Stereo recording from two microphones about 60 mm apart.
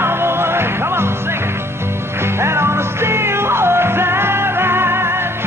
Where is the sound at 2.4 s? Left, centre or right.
Right.